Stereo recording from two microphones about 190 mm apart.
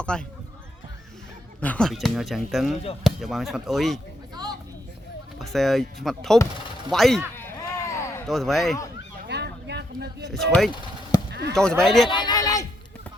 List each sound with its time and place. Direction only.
0.0 s speech: 5° left (ahead or behind)
1.6 s speech: 5° left (ahead or behind)
5.4 s speech: centre (ahead or behind)
7.3 s a sound: 10° left (ahead or behind)
8.3 s speech: centre (ahead or behind)
9.2 s a sound: 60° right (ahead or behind)
10.3 s speech: centre (ahead or behind)
10.7 s a sound: 25° left (ahead or behind)
11.3 s chop: 60° right (ahead or behind)
11.5 s speech: 5° left (ahead or behind)
12.0 s a man's voice: 25° left (ahead or behind)